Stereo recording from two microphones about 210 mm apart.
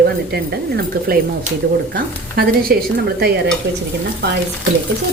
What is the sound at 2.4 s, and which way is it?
Speech, 45° right (ahead or behind).